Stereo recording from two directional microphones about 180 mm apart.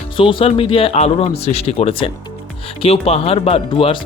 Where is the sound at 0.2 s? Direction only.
30° left (ahead or behind).